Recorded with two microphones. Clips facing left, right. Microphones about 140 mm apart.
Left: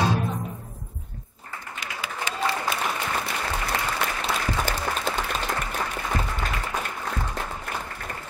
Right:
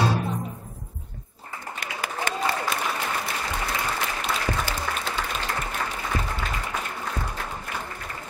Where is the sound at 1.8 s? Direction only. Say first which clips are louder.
Right 2 dB; 50° right (ahead or behind).